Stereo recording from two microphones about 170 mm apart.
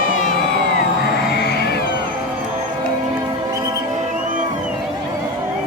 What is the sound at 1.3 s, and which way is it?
Cat, 70° left (ahead or behind).